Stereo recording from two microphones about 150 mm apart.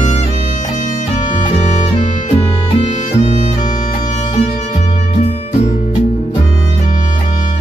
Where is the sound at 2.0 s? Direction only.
45° left (ahead or behind).